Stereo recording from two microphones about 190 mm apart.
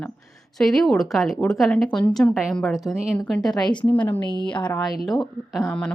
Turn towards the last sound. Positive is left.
turn(degrees=0)  # may be behind; listen again after turning